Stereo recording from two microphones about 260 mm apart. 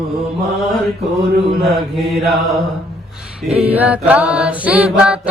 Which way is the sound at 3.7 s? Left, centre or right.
Centre.